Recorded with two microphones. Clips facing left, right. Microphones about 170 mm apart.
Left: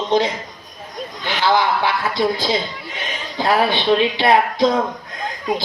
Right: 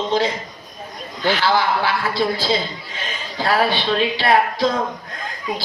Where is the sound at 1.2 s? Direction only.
20° left (ahead or behind).